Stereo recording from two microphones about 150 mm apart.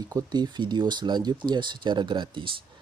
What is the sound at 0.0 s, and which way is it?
Speech, 25° right (ahead or behind).